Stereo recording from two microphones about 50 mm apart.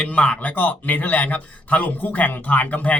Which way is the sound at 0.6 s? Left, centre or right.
Left.